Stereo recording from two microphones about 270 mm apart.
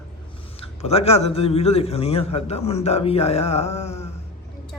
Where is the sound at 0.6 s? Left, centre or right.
Left.